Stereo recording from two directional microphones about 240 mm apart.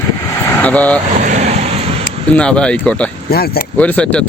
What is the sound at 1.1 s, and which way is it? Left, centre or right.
Vehicle, right.